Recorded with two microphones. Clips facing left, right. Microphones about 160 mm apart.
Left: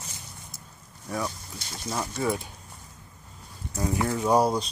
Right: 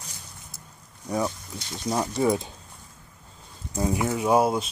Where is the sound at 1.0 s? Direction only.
20° right (ahead or behind).